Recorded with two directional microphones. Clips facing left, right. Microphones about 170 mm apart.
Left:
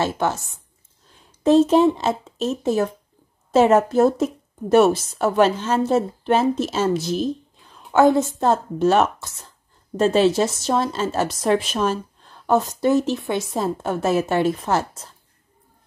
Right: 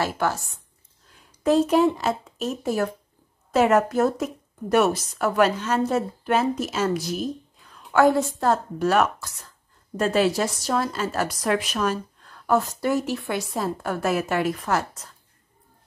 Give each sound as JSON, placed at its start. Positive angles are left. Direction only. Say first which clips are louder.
{"t": 0.0, "sound": "a woman's voice", "louder": "left 3 dB", "side_deg": 20}
{"t": 7.7, "sound": "a sound", "louder": "left 3 dB", "side_deg": 20}
{"t": 8.4, "sound": "a woman's voice", "louder": "left 3 dB", "side_deg": 25}